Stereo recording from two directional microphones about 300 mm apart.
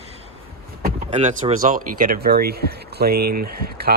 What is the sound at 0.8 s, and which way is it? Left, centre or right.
Speech, right.